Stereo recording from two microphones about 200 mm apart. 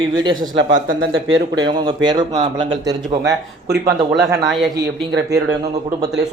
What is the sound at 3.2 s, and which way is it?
Speech, 55° right (ahead or behind).